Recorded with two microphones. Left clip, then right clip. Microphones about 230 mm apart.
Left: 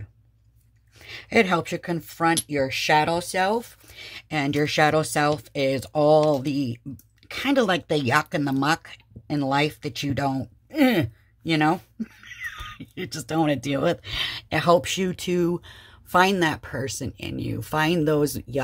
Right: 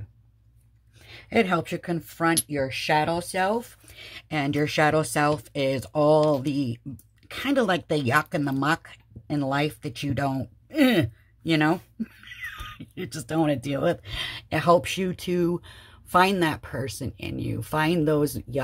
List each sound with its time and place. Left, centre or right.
0.9 s speech: centre